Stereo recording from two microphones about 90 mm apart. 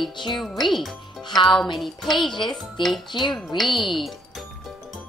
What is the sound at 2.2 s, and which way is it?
Speech, 60° left (ahead or behind).